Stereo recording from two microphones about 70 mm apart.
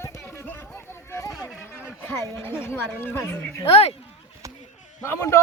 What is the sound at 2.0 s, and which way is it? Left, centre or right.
Speech, left.